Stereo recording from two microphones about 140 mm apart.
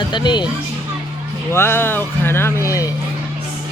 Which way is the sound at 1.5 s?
15° left (ahead or behind).